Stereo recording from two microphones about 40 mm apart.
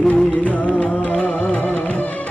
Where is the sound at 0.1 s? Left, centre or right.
Left.